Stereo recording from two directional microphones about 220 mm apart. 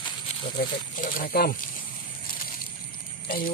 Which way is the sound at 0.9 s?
40° left (ahead or behind).